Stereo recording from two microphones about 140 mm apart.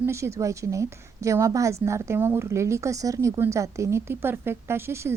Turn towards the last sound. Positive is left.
turn(degrees=-20)  # may be behind; listen again after turning